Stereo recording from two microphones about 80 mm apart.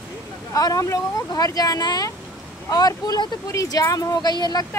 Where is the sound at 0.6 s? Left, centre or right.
Left.